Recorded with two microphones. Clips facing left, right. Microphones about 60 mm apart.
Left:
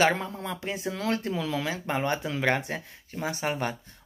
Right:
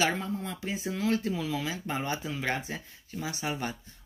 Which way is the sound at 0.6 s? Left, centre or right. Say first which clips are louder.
Left 1 dB; left.